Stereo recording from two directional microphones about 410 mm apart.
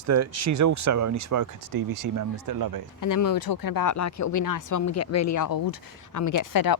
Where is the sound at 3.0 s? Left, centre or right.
Left.